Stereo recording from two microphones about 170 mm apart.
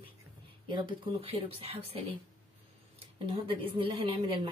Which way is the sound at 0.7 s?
35° right (ahead or behind).